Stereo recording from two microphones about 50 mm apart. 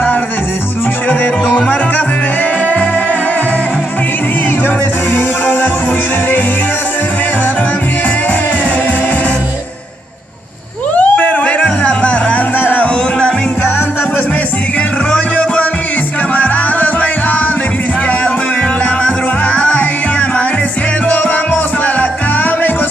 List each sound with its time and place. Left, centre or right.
1.2 s music: left
5.1 s music: left
11.0 s music: left
12.5 s music: left
15.1 s music: left
19.0 s music: left